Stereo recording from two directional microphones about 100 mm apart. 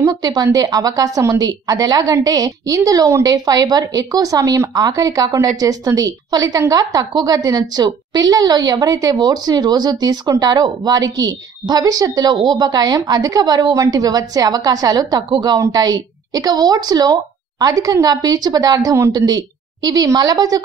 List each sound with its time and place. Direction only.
0.0 s a woman's voice: 40° right (ahead or behind)